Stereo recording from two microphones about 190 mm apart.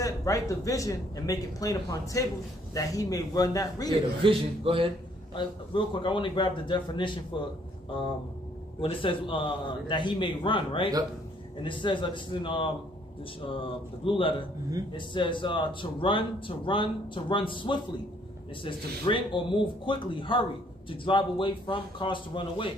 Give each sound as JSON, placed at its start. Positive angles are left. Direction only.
{"t": 0.0, "sound": "speech", "side_deg": 15}
{"t": 4.2, "sound": "a man's voice", "side_deg": -30}
{"t": 5.3, "sound": "speech", "side_deg": 25}
{"t": 8.8, "sound": "speech", "side_deg": 25}